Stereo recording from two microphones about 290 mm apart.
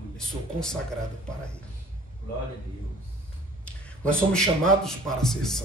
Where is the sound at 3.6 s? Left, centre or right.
Centre.